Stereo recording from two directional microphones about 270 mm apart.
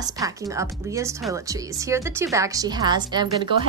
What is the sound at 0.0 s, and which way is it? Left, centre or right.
A woman's voice, centre.